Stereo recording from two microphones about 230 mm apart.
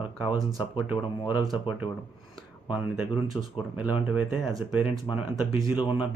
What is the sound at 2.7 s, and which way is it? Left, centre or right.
Speech, centre.